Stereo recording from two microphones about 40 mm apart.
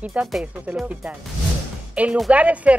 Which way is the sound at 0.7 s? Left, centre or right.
Right.